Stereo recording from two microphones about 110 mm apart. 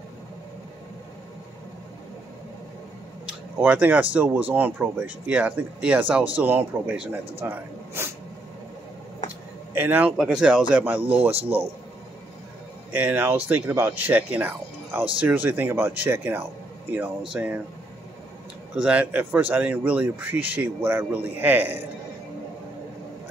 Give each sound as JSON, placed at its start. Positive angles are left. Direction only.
{"t": 3.3, "sound": "speech", "side_deg": -10}
{"t": 9.8, "sound": "speech", "side_deg": -15}
{"t": 10.1, "sound": "speech", "side_deg": -5}
{"t": 12.9, "sound": "speech", "side_deg": -15}
{"t": 18.8, "sound": "speech", "side_deg": -10}